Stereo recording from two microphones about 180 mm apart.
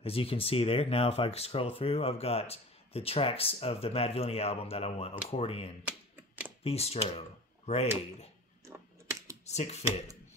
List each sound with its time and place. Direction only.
0.0 s speech: 30° left (ahead or behind)
5.9 s typewriter: 5° right (ahead or behind)
6.6 s speech: 35° left (ahead or behind)
8.6 s typing: 15° right (ahead or behind)
9.5 s speech: 40° left (ahead or behind)